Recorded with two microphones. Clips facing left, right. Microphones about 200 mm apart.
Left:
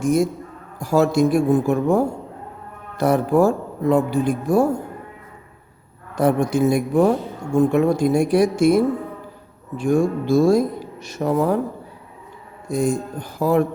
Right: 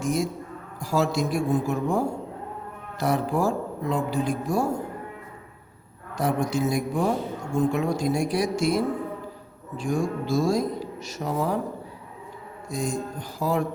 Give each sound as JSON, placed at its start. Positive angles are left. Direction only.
{"t": 0.0, "sound": "a man's voice", "side_deg": 50}
{"t": 3.3, "sound": "speech", "side_deg": 55}
{"t": 6.1, "sound": "speech", "side_deg": 55}
{"t": 12.6, "sound": "speech", "side_deg": 60}